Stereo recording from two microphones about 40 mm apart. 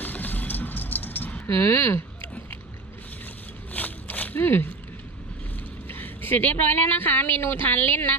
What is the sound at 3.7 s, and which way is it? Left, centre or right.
Zipper, left.